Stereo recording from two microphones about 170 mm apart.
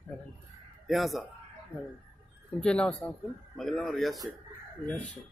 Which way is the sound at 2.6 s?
5° left (ahead or behind).